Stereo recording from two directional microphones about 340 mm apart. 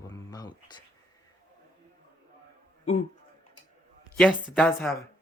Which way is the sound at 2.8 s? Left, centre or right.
Centre.